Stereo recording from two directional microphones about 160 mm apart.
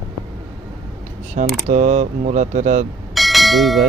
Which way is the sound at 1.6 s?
45° right (ahead or behind).